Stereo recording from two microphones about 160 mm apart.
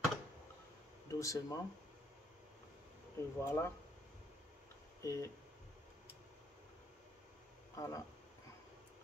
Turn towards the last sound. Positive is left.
turn(degrees=20)  # may be behind; listen again after turning